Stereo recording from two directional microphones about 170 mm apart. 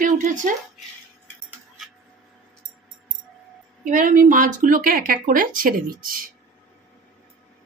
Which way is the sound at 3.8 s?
50° right (ahead or behind).